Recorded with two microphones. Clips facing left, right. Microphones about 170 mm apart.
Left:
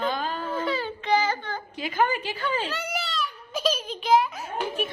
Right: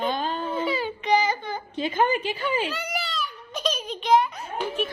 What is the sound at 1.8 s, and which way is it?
Speech, 25° right (ahead or behind).